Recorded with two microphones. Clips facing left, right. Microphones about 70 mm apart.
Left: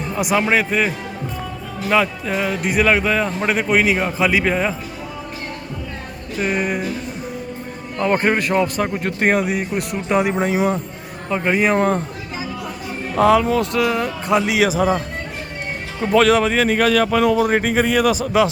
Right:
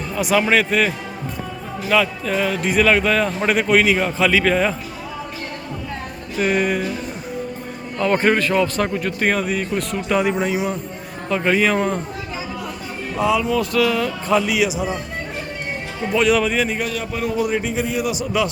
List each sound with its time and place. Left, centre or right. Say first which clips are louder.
0.3 s a man's voice: right 1 dB; centre
1.9 s speech: even; left
2.6 s a man's voice: even; centre
6.4 s music: right 2 dB; centre
8.1 s a man's voice: even; centre
8.9 s speech: left 1 dB; left
9.3 s speech: left 2 dB; centre; by 10.8 s left
11.3 s speech: even; centre
13.2 s speech: left 4 dB; left
13.6 s a man's voice: even; left
14.8 s speech: left 6 dB; left
16.3 s speech: left 2 dB; left
16.6 s a man's voice: left 8 dB; left
17.5 s a man's voice: left 5 dB; left